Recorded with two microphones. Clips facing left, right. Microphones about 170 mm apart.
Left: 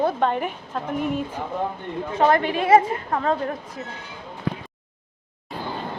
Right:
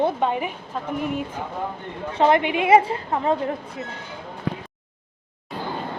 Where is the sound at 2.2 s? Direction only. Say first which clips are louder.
Right 1 dB; 20° right (ahead or behind).